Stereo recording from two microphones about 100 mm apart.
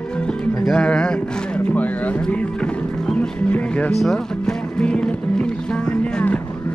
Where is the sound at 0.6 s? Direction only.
10° left (ahead or behind).